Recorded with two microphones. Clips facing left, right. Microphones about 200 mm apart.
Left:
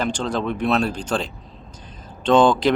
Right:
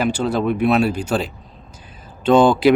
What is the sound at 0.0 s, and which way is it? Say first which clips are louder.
Speech: right 4 dB; 10° right (ahead or behind).